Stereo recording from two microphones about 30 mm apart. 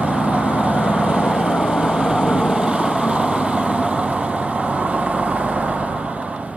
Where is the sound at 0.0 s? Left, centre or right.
Right.